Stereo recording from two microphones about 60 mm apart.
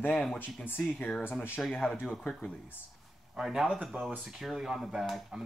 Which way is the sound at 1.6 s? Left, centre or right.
Centre.